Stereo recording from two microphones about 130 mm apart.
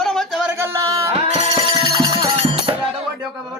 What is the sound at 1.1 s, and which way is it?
Music, 50° right (ahead or behind).